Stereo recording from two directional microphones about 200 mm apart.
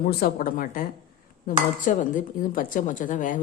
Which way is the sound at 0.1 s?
50° left (ahead or behind).